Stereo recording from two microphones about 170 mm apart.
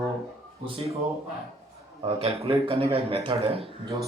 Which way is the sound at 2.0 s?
35° right (ahead or behind).